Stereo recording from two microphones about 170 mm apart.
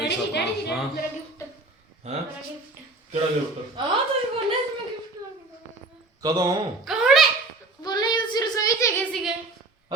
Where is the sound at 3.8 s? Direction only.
25° right (ahead or behind).